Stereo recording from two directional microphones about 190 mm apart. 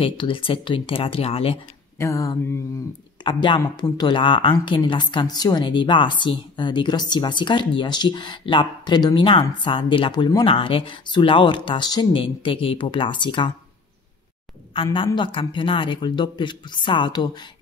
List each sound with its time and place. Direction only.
0.0 s speech: 30° left (ahead or behind)
2.0 s a sound: 15° left (ahead or behind)
3.3 s speech: 25° left (ahead or behind)
14.7 s a woman's voice: 25° left (ahead or behind)